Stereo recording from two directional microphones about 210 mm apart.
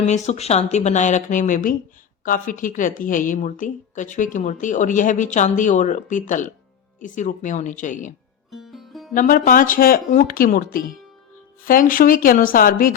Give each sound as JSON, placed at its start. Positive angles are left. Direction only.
{"t": 0.0, "sound": "a woman's voice", "side_deg": 30}
{"t": 8.5, "sound": "music", "side_deg": 0}
{"t": 9.1, "sound": "a woman's voice", "side_deg": 40}